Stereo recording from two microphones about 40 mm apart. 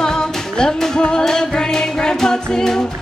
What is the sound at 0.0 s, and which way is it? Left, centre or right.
Music, centre.